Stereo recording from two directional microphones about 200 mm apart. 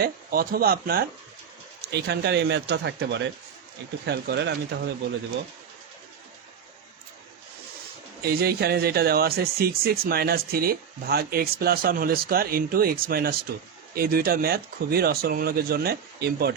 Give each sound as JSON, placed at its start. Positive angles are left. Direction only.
{"t": 0.0, "sound": "speech", "side_deg": -50}
{"t": 8.2, "sound": "speech", "side_deg": -50}